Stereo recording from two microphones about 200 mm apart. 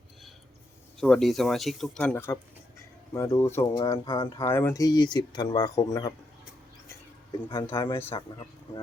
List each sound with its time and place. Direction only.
0.9 s speech: 5° left (ahead or behind)
3.9 s speech: 25° left (ahead or behind)
4.4 s speech: 10° left (ahead or behind)
7.7 s speech: 25° left (ahead or behind)